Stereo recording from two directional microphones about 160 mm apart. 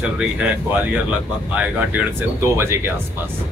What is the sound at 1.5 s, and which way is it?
Speech, 10° right (ahead or behind).